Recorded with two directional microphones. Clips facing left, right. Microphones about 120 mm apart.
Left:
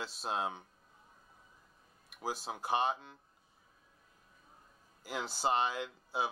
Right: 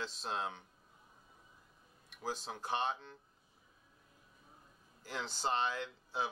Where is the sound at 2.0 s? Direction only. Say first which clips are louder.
Left 2 dB; 10° left (ahead or behind).